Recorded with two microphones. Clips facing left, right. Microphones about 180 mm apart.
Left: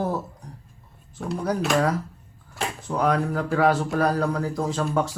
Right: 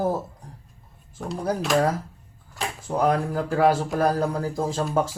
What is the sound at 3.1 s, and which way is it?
Speech, 30° right (ahead or behind).